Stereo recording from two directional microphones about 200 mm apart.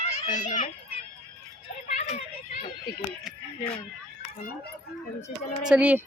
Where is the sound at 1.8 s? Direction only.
35° left (ahead or behind).